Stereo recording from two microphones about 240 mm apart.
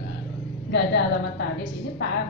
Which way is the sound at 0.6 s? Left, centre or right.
Left.